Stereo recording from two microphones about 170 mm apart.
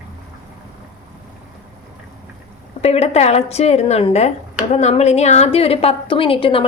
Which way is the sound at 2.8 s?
40° left (ahead or behind).